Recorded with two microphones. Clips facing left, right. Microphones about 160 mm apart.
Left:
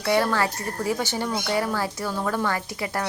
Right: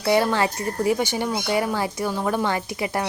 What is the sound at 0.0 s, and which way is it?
A woman's voice, 20° right (ahead or behind).